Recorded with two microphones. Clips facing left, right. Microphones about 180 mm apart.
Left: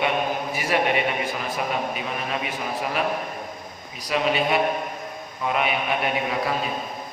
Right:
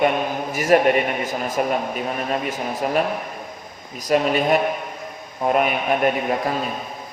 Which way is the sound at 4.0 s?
45° right (ahead or behind).